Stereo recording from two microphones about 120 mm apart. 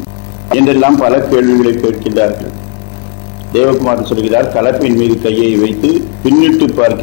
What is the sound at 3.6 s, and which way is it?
A man's voice, 20° left (ahead or behind).